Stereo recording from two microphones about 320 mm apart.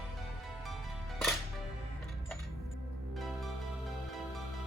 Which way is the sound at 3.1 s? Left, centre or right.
Centre.